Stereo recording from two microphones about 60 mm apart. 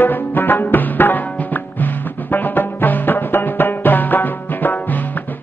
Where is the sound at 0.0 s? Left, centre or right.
Left.